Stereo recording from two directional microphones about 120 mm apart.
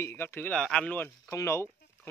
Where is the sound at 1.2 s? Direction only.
25° left (ahead or behind).